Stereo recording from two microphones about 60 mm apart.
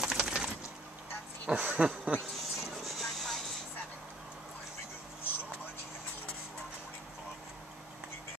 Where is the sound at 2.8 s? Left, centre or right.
Centre.